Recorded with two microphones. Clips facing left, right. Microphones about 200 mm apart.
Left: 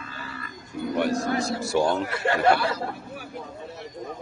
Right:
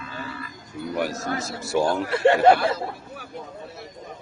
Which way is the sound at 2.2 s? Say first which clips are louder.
Right 7 dB; 25° right (ahead or behind).